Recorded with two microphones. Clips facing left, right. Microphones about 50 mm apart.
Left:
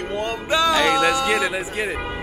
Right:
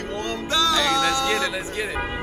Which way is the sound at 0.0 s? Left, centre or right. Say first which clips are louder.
Left 2 dB; centre.